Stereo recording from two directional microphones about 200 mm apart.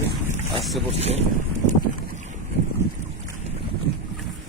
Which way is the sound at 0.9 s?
30° right (ahead or behind).